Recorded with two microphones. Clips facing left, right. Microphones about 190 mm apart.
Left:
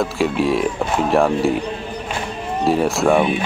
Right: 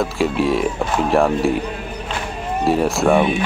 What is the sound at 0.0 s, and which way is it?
Speech, centre (ahead or behind).